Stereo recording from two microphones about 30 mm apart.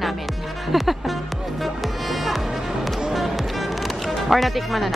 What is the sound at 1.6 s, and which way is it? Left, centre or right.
Music, centre.